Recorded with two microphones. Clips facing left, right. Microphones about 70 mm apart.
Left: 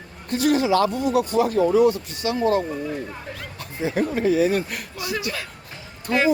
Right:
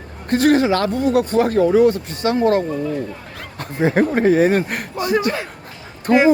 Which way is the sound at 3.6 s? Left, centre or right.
Right.